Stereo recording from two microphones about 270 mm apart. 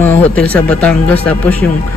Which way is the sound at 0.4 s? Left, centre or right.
Centre.